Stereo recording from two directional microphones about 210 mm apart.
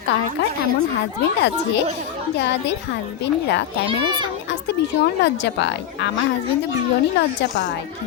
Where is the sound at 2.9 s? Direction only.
60° left (ahead or behind).